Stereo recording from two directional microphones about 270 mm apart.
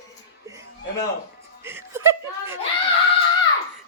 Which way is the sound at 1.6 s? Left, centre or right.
Centre.